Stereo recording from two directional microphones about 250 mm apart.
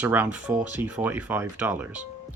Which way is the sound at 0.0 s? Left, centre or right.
Centre.